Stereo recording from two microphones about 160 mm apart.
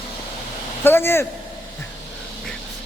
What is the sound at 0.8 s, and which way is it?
Speech, 15° left (ahead or behind).